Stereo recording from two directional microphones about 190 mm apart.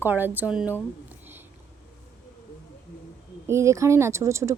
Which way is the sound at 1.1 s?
10° right (ahead or behind).